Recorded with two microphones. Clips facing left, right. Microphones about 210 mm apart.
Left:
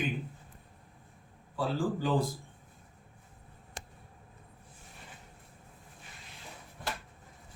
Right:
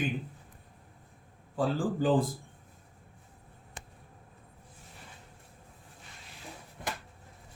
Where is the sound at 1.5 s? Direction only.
50° right (ahead or behind).